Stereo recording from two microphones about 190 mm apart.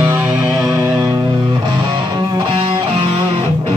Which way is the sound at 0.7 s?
15° right (ahead or behind).